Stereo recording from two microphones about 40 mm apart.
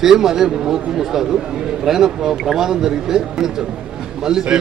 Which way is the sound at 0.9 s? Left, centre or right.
Centre.